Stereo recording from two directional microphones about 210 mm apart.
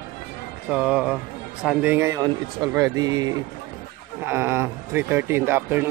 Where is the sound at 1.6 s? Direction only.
10° right (ahead or behind).